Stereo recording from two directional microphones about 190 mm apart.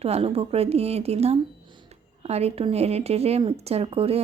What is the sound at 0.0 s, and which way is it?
A woman's voice, 30° right (ahead or behind).